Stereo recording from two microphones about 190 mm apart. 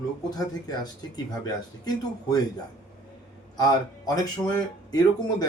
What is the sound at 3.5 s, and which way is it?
Speech, 20° left (ahead or behind).